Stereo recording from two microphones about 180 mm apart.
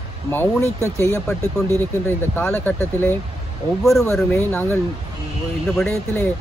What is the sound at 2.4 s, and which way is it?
Speech, 10° left (ahead or behind).